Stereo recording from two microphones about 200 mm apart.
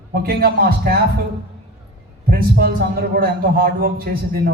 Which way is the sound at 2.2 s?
50° right (ahead or behind).